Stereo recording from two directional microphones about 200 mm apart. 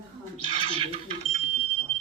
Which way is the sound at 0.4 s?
25° right (ahead or behind).